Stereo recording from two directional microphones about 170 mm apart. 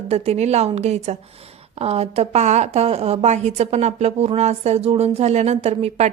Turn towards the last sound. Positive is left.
turn(degrees=-40)  # may be behind; listen again after turning